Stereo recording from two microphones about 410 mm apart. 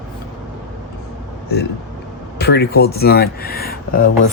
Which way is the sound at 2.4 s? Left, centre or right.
Left.